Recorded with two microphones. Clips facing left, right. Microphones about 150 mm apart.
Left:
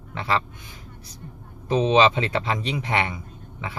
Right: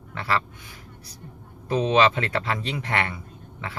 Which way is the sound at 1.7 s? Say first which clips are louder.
Left 2 dB; 20° left (ahead or behind).